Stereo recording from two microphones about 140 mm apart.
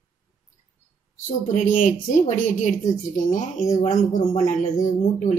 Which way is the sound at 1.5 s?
65° left (ahead or behind).